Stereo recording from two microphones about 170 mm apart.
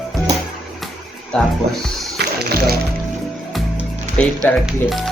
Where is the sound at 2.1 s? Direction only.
70° right (ahead or behind).